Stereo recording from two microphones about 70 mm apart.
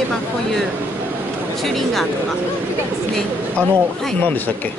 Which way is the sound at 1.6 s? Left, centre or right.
Centre.